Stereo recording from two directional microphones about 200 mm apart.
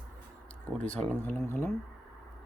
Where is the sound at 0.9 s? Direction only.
5° left (ahead or behind).